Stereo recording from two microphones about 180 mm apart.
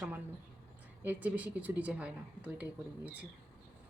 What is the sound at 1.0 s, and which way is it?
A woman's voice, 10° right (ahead or behind).